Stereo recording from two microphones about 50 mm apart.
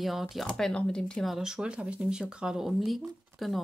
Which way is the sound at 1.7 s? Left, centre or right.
Right.